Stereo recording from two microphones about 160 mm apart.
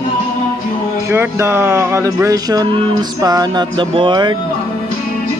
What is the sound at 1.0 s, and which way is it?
Speech, 15° right (ahead or behind).